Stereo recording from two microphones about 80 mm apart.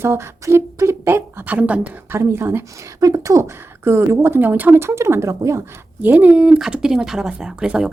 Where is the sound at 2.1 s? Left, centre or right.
Right.